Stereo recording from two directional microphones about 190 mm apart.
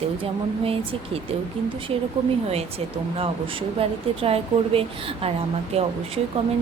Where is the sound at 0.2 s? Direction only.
30° right (ahead or behind).